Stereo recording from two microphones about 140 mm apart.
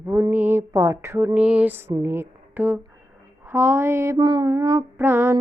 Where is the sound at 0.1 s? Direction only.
15° right (ahead or behind).